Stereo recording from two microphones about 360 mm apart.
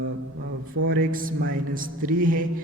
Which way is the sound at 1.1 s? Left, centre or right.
Right.